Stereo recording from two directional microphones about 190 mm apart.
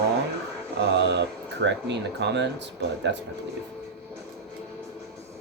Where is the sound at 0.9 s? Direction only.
65° right (ahead or behind).